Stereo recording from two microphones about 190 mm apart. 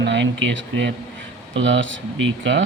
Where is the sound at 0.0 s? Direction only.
70° right (ahead or behind).